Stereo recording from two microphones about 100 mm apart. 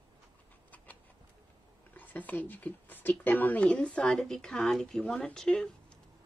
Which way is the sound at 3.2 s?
20° left (ahead or behind).